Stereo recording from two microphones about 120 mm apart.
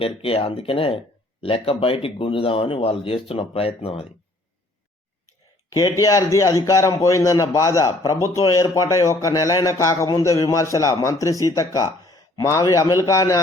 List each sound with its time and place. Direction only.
0.2 s speech: 50° left (ahead or behind)
5.7 s a man's voice: 30° left (ahead or behind)